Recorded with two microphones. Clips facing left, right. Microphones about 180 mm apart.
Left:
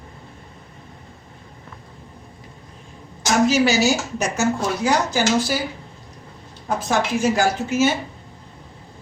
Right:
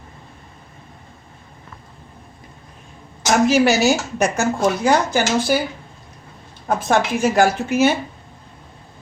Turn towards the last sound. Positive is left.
turn(degrees=-60)  # may be behind; listen again after turning